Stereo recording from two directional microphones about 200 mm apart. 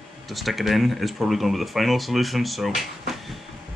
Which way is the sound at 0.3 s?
Centre (ahead or behind).